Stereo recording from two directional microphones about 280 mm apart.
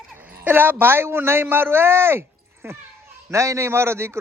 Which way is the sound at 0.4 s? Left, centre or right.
Centre.